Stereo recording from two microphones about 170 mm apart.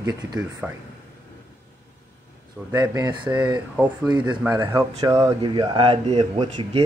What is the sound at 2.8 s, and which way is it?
Speech, 25° right (ahead or behind).